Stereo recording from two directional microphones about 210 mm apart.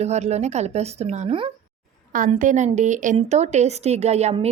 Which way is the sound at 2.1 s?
40° right (ahead or behind).